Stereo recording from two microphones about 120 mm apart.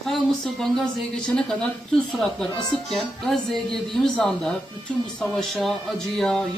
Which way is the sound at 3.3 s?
5° left (ahead or behind).